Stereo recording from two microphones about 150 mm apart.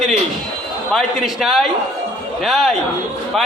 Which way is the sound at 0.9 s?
Centre (ahead or behind).